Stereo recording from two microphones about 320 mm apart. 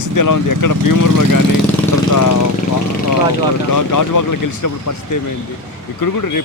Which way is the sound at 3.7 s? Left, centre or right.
Left.